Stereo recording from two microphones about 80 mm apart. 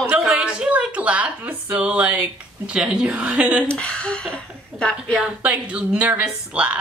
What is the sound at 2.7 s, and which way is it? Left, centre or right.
Speech, centre.